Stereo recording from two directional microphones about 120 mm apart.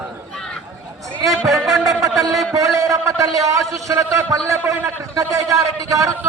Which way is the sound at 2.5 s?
25° right (ahead or behind).